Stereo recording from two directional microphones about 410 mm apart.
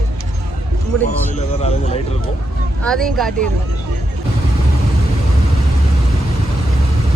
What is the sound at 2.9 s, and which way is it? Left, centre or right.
Speech, centre.